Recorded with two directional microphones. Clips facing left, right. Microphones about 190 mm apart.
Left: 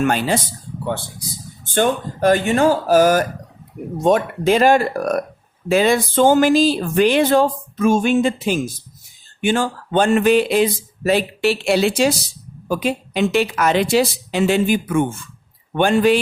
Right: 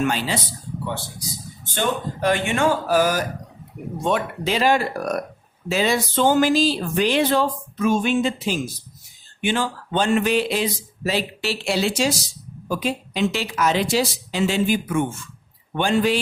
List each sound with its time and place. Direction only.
0.0 s speech: 50° left (ahead or behind)
1.7 s speech: 45° left (ahead or behind)